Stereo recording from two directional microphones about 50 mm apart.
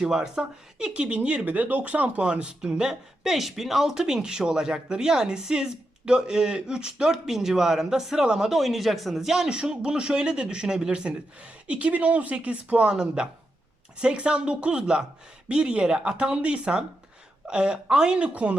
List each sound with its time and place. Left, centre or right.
0.0 s speech: centre
3.2 s speech: centre